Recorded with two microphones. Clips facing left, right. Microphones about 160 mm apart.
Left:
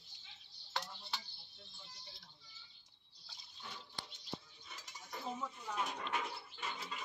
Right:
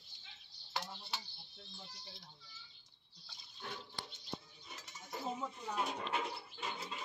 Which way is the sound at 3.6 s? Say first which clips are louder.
Right 5 dB; 60° right (ahead or behind).